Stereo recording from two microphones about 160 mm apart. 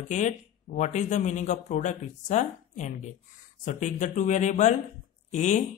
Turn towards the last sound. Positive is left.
turn(degrees=50)  # may be behind; listen again after turning